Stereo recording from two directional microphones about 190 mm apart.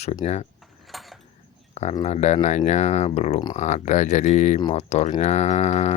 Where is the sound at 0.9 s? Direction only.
Centre (ahead or behind).